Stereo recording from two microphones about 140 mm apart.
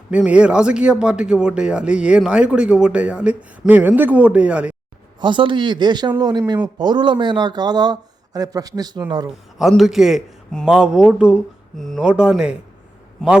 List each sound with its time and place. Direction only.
0.1 s speech: 10° right (ahead or behind)
5.2 s speech: 35° right (ahead or behind)
9.6 s a man's voice: centre (ahead or behind)